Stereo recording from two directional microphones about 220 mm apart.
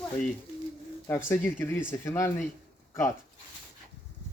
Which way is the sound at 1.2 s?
10° left (ahead or behind).